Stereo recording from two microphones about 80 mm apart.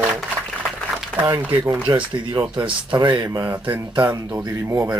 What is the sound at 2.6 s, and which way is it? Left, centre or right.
Speech, right.